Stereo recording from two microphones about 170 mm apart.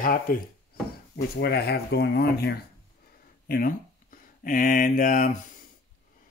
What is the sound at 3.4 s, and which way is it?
Speech, 60° left (ahead or behind).